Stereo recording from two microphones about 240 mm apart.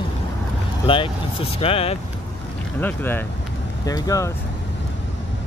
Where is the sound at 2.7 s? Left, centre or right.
Centre.